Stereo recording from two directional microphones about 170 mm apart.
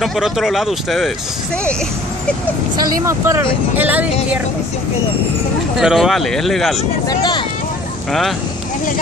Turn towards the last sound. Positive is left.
turn(degrees=25)  # may be behind; listen again after turning